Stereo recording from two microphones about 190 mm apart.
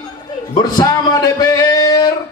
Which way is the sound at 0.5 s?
20° left (ahead or behind).